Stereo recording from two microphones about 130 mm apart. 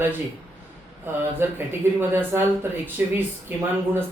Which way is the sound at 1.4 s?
20° right (ahead or behind).